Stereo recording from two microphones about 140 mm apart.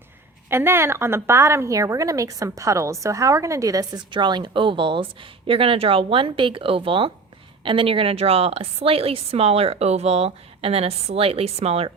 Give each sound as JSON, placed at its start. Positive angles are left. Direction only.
{"t": 0.5, "sound": "a woman's voice", "side_deg": -15}